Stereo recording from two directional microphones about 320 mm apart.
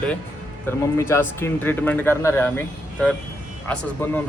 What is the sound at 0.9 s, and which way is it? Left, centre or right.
Speech, centre.